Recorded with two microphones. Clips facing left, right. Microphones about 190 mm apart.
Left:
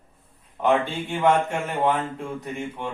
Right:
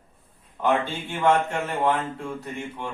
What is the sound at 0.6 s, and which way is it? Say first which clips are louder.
Speech: left 2 dB; 15° left (ahead or behind).